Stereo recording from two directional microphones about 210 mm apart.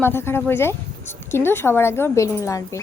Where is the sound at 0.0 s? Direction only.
10° left (ahead or behind).